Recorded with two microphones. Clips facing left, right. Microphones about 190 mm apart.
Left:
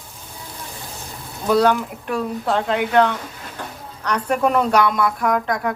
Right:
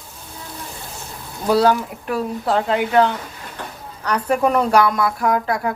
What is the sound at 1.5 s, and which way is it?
Speech, 5° right (ahead or behind).